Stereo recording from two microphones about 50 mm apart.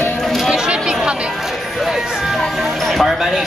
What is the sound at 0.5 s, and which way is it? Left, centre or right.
Chatter, centre.